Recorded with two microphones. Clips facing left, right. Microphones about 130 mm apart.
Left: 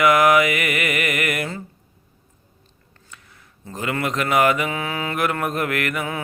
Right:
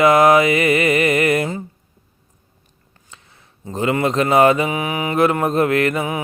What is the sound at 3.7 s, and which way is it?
Mantra, 25° right (ahead or behind).